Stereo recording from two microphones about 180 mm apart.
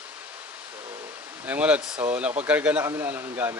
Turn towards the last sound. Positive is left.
turn(degrees=-10)  # may be behind; listen again after turning